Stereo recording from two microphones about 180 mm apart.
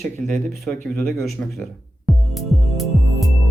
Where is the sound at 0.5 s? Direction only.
Centre (ahead or behind).